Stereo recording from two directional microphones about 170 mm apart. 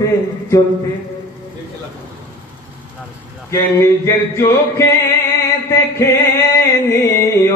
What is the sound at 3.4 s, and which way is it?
Mantra, 15° left (ahead or behind).